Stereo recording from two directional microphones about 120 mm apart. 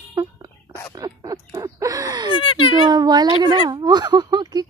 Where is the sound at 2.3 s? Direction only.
45° left (ahead or behind).